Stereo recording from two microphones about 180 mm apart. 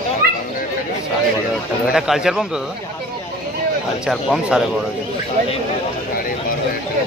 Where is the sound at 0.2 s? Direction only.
60° right (ahead or behind).